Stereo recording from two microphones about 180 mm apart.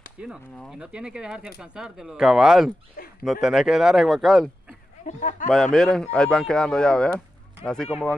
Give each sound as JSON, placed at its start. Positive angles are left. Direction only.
{"t": 0.2, "sound": "speech", "side_deg": 0}
{"t": 5.0, "sound": "speech", "side_deg": 45}
{"t": 5.5, "sound": "speech", "side_deg": 0}